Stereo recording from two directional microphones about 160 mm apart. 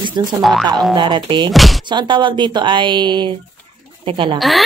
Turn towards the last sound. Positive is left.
turn(degrees=0)  # may be behind; listen again after turning